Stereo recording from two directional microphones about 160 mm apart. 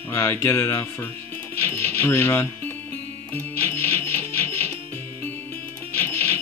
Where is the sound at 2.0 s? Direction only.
15° left (ahead or behind).